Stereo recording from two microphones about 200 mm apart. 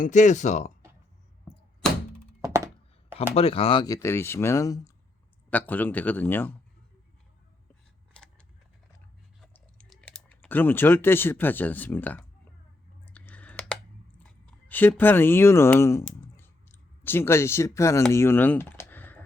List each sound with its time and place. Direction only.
0.0 s speech: 35° left (ahead or behind)
1.8 s thunk: 5° left (ahead or behind)
2.4 s thunk: 15° right (ahead or behind)
3.3 s speech: 30° left (ahead or behind); by 6.5 s 10° left (ahead or behind)
8.1 s a sound: 5° left (ahead or behind)
9.4 s clicking: 5° left (ahead or behind)
14.4 s speech: 10° left (ahead or behind)